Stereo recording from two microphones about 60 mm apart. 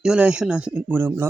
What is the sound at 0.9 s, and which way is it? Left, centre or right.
Speech, right.